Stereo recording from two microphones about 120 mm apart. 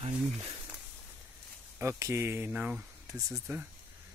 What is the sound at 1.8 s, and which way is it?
Speech, 20° right (ahead or behind).